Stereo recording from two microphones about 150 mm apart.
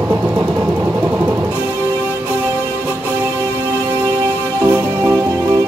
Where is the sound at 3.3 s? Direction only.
25° right (ahead or behind).